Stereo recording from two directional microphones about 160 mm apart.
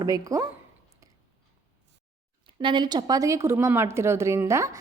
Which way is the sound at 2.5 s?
30° right (ahead or behind).